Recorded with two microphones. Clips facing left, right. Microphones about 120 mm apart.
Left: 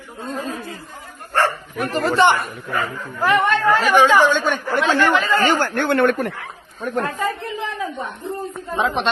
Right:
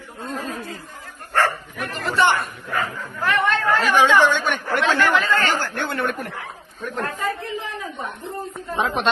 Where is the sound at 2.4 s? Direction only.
Centre (ahead or behind).